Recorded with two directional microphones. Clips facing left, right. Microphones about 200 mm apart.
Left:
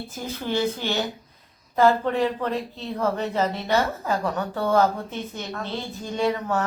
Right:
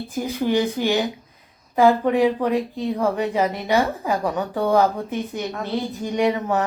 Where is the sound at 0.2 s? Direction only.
15° right (ahead or behind).